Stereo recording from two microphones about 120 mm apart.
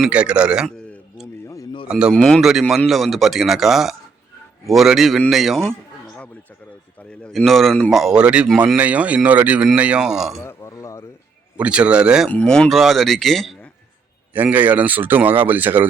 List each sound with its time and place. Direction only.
0.0 s speech: 10° right (ahead or behind)
1.9 s speech: 5° right (ahead or behind)
7.1 s speech: 5° left (ahead or behind)
10.4 s a sound: 25° left (ahead or behind)
11.5 s speech: 10° right (ahead or behind)
12.3 s speech: 10° left (ahead or behind)
14.3 s speech: 15° right (ahead or behind)